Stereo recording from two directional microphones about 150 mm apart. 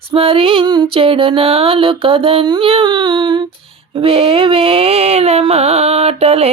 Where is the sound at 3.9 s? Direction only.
40° right (ahead or behind).